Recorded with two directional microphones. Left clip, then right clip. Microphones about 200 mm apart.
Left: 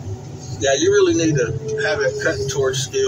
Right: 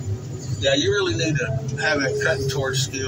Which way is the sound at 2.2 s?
10° left (ahead or behind).